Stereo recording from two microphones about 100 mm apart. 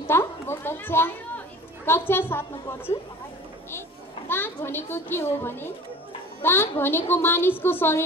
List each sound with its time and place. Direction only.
0.0 s a sound: 25° left (ahead or behind)
1.9 s a woman's voice: 25° left (ahead or behind)
4.3 s a woman's voice: 20° left (ahead or behind)